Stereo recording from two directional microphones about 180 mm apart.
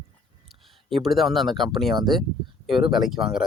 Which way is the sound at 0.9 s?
Centre (ahead or behind).